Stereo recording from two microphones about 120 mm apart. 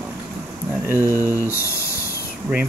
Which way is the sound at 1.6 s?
25° left (ahead or behind).